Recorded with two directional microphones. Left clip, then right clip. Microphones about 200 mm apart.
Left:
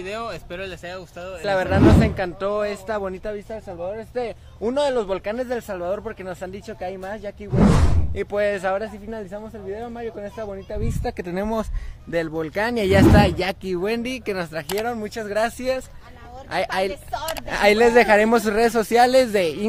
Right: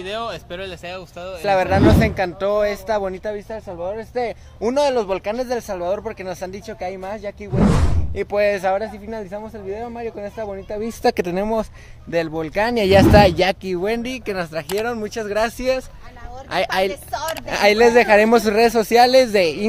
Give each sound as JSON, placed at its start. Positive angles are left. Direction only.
{"t": 0.0, "sound": "speech", "side_deg": 15}
{"t": 1.4, "sound": "speech", "side_deg": -5}
{"t": 3.9, "sound": "speech", "side_deg": -15}
{"t": 11.0, "sound": "speech", "side_deg": -60}
{"t": 12.1, "sound": "speech", "side_deg": -5}
{"t": 13.7, "sound": "speech", "side_deg": 5}